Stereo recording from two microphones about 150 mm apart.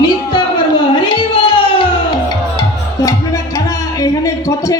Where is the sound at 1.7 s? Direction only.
30° left (ahead or behind).